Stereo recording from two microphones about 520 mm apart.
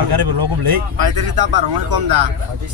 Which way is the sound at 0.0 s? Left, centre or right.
Right.